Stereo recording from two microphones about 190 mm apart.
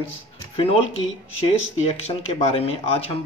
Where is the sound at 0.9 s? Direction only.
90° left.